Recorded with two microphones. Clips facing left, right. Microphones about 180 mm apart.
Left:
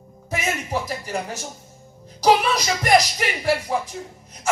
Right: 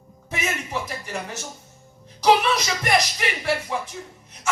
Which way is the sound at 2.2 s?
40° left (ahead or behind).